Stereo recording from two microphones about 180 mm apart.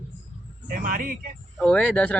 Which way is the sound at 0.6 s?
50° right (ahead or behind).